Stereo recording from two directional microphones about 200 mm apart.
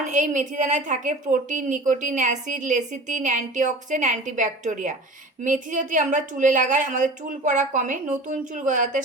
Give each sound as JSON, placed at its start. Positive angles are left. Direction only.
{"t": 0.0, "sound": "a woman's voice", "side_deg": -40}